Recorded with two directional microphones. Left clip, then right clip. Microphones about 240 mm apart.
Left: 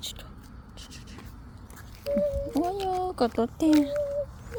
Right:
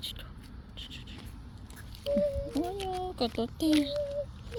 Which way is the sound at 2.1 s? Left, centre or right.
Centre.